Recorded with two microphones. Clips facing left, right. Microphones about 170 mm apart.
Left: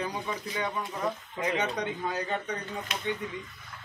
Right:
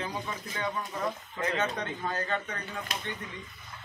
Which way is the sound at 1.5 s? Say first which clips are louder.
Left 1 dB; 15° left (ahead or behind).